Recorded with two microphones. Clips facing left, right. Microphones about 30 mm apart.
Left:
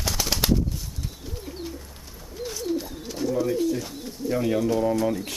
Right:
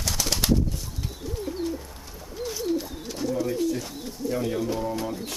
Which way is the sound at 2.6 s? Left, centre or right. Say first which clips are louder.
Right 1 dB; centre.